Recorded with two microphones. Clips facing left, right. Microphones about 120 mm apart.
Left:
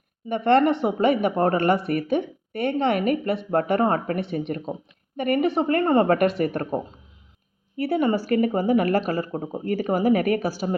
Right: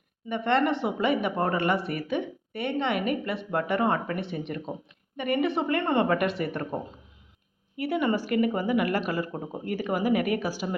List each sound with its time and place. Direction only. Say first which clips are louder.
0.3 s a woman's voice: left 6 dB; 40° left (ahead or behind)
7.8 s a woman's voice: left 4 dB; 35° left (ahead or behind)